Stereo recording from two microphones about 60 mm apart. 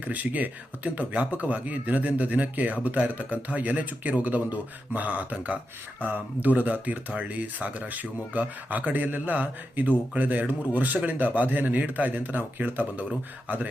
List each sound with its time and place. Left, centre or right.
0.0 s speech: right